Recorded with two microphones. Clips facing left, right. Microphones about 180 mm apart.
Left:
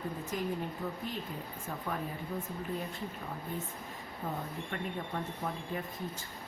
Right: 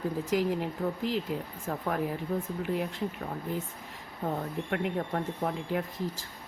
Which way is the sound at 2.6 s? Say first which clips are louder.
Right 6 dB; 80° right.